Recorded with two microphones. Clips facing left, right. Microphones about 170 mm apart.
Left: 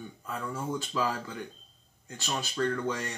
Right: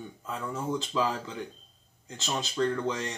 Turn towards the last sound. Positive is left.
turn(degrees=-20)  # may be behind; listen again after turning